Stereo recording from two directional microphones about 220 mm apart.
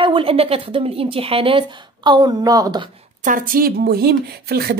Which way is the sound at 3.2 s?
40° right (ahead or behind).